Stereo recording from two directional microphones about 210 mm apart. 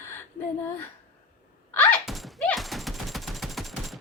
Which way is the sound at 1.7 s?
10° left (ahead or behind).